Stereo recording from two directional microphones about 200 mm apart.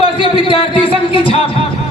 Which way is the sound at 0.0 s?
25° left (ahead or behind).